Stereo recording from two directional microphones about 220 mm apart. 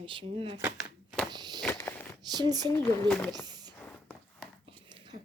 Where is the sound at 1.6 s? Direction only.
10° left (ahead or behind).